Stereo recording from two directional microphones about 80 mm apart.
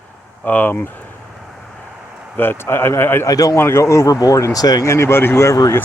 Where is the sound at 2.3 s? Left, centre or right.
Left.